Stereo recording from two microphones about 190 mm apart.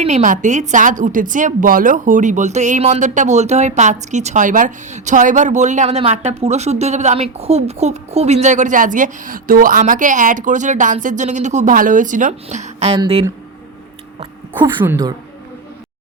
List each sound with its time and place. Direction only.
0.0 s a woman's voice: 40° right (ahead or behind)
14.2 s a sound: 25° right (ahead or behind)
14.8 s a woman's voice: 15° right (ahead or behind)